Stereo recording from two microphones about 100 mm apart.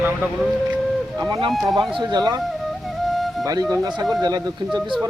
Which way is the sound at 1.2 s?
45° right (ahead or behind).